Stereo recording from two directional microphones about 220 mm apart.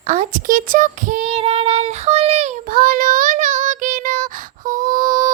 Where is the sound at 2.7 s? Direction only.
40° right (ahead or behind).